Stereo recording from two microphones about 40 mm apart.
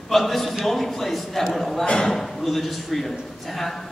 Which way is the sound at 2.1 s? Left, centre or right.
Centre.